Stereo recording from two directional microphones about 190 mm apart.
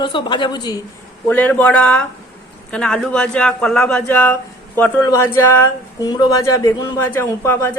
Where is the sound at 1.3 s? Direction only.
10° left (ahead or behind).